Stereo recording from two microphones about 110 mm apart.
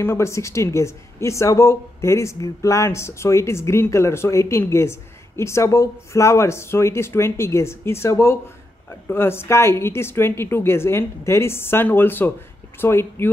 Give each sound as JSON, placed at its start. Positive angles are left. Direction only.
{"t": 0.0, "sound": "speech", "side_deg": 25}